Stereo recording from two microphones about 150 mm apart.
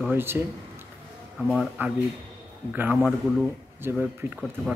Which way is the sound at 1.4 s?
5° right (ahead or behind).